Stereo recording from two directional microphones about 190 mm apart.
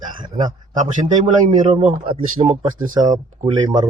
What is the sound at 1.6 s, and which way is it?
Speech, 30° right (ahead or behind).